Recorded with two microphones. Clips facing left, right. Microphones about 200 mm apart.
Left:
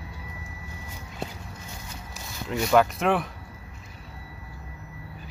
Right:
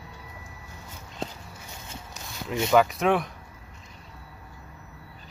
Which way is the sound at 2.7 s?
Centre (ahead or behind).